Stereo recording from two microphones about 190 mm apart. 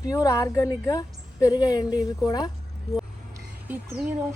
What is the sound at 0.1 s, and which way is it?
A woman's voice, 20° left (ahead or behind).